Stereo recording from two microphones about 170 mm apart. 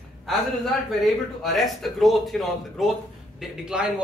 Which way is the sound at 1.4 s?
Centre (ahead or behind).